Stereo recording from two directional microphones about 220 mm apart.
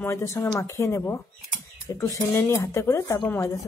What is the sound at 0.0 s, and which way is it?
Speech, 15° left (ahead or behind).